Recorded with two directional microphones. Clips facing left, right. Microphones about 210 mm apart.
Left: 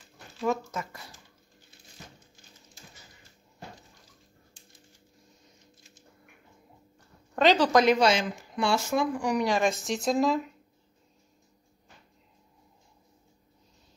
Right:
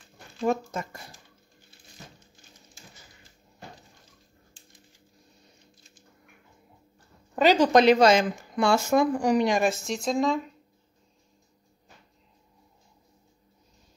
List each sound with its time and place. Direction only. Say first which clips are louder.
0.4 s speech: right 3 dB; 30° right (ahead or behind)
7.3 s speech: right 2 dB; 10° right (ahead or behind)
7.8 s speech: right 4 dB; 40° right (ahead or behind)
9.6 s speech: right 1 dB; centre (ahead or behind)